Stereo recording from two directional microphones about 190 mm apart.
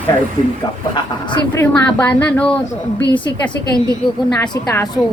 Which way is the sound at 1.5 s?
10° left (ahead or behind).